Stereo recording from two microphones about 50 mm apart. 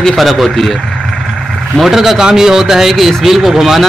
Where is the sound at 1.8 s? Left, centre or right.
Centre.